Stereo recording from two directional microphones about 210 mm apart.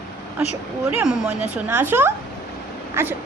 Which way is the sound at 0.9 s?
10° right (ahead or behind).